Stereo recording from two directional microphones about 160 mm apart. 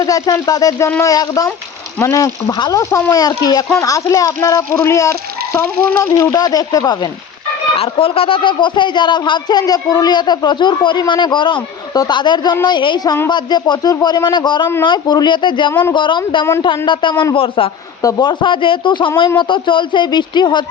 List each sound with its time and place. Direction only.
0.0 s speech: 20° left (ahead or behind)
7.8 s speech: 35° left (ahead or behind)
15.7 s speech: 10° left (ahead or behind)
16.0 s speech: 30° left (ahead or behind)